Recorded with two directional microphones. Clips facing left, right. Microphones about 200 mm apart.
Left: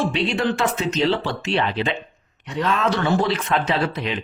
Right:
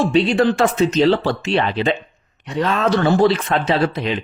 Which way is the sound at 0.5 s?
40° right (ahead or behind).